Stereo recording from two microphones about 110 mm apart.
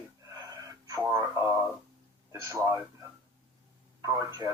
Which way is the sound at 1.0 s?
20° right (ahead or behind).